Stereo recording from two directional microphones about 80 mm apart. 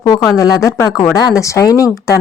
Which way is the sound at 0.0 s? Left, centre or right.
Left.